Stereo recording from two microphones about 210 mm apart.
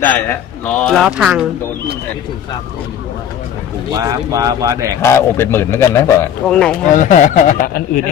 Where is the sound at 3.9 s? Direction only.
15° right (ahead or behind).